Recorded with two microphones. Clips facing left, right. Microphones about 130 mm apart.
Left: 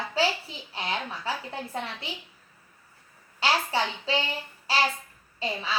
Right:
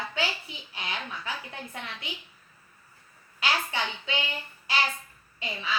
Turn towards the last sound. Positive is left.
turn(degrees=30)  # may be behind; listen again after turning